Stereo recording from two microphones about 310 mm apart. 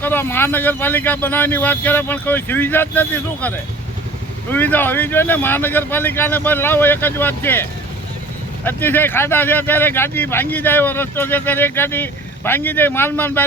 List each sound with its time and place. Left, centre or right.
0.0 s speech: centre
4.5 s speech: centre